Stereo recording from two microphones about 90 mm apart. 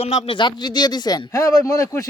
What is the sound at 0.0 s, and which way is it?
Speech, 75° left (ahead or behind).